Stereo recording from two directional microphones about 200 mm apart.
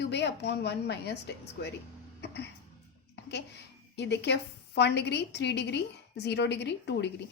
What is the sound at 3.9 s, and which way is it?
A woman's voice, 60° left (ahead or behind).